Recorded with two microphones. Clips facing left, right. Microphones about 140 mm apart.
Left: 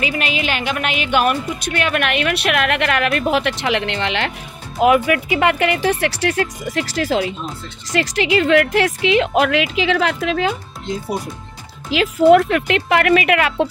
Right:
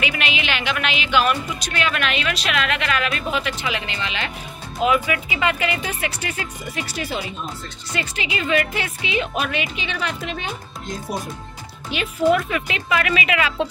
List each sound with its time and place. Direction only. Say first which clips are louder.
0.0 s a woman's voice: left 4 dB; 40° left (ahead or behind); by 10.5 s 90° left
11.9 s a woman's voice: left 8 dB; 90° left
12.3 s speech: left 8 dB; 70° left (ahead or behind)